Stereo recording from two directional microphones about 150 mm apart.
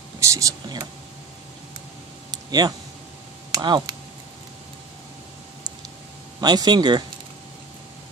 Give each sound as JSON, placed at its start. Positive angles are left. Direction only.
{"t": 0.2, "sound": "speech", "side_deg": -20}
{"t": 2.3, "sound": "a sound", "side_deg": -25}
{"t": 3.5, "sound": "speech", "side_deg": -25}
{"t": 6.4, "sound": "speech", "side_deg": -30}